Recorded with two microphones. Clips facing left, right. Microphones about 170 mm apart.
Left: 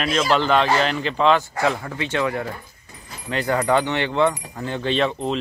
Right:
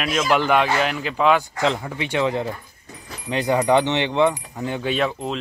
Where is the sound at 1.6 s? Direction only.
20° right (ahead or behind).